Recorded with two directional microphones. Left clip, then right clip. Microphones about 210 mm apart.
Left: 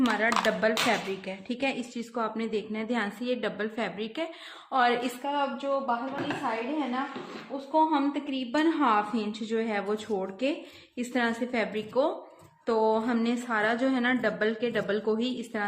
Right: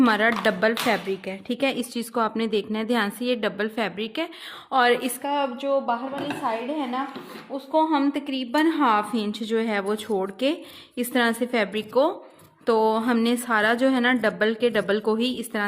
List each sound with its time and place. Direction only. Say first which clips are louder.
0.0 s a woman's voice: right 5 dB; 50° right (ahead or behind)